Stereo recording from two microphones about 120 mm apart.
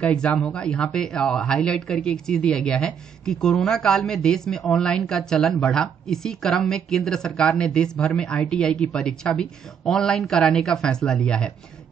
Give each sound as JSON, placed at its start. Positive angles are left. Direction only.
{"t": 0.0, "sound": "speech", "side_deg": 10}